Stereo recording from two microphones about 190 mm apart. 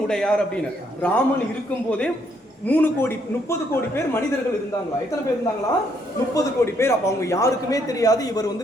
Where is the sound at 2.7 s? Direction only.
10° left (ahead or behind).